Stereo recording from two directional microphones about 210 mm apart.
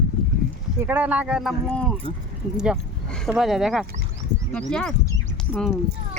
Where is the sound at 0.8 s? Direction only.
10° right (ahead or behind).